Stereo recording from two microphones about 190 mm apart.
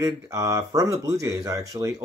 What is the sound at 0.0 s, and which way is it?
Speech, 15° right (ahead or behind).